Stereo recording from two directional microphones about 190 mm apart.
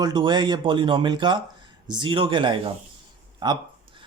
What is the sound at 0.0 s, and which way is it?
A man's voice, 25° right (ahead or behind).